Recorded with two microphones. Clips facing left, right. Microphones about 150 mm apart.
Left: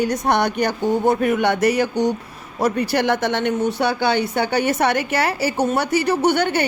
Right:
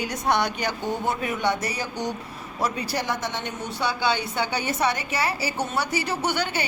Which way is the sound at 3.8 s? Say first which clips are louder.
Left 6 dB; 55° left (ahead or behind).